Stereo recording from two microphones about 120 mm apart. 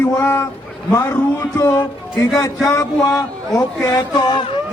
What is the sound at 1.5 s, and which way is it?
Speech, 30° left (ahead or behind).